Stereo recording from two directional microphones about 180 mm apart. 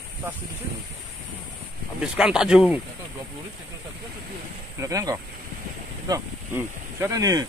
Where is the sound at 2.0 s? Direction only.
5° right (ahead or behind).